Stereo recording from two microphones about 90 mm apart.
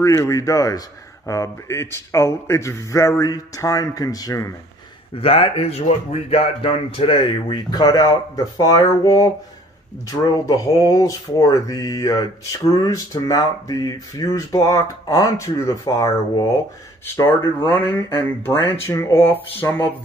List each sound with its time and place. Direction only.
0.0 s speech: 35° left (ahead or behind)
5.1 s speech: 90° left; by 16.5 s 40° left (ahead or behind)
17.3 s speech: 25° left (ahead or behind)